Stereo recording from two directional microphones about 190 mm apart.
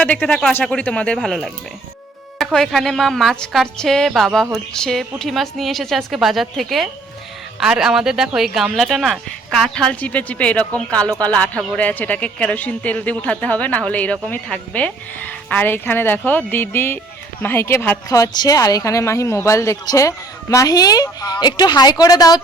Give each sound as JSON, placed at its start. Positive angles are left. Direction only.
{"t": 0.0, "sound": "a woman's voice", "side_deg": 5}